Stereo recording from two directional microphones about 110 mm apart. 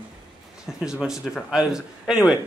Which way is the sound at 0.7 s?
5° right (ahead or behind).